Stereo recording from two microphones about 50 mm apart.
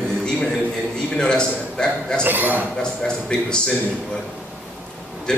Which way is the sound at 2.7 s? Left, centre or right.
Centre.